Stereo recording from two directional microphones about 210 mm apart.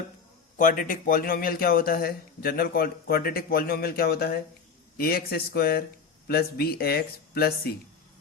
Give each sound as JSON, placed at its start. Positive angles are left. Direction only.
{"t": 0.5, "sound": "speech", "side_deg": 40}